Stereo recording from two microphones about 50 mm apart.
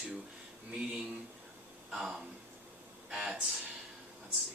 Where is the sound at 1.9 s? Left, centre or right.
Centre.